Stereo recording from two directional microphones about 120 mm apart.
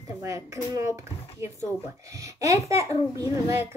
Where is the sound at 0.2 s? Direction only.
25° right (ahead or behind).